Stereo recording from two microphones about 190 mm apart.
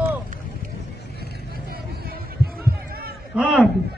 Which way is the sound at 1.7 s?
50° right (ahead or behind).